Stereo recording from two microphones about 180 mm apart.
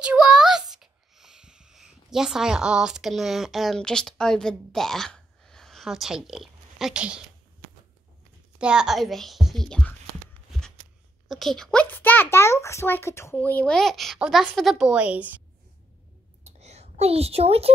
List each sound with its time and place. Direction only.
0.0 s a child's voice: 5° right (ahead or behind)
8.5 s speech: 5° right (ahead or behind)
11.2 s a child's voice: centre (ahead or behind)
16.4 s a sound: 35° right (ahead or behind)